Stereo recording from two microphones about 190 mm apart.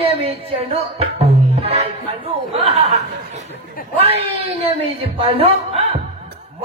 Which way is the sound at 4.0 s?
30° right (ahead or behind).